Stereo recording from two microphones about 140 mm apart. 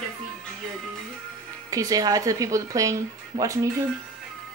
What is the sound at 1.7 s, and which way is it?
Speech, 25° right (ahead or behind).